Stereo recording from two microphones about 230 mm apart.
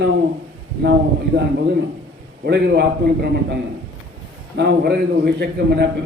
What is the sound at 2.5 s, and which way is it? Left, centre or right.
Speech, right.